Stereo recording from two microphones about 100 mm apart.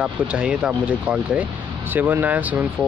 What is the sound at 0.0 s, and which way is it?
Speech, 10° right (ahead or behind).